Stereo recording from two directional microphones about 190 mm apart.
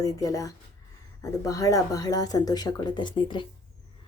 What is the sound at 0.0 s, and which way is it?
Speech, 20° left (ahead or behind).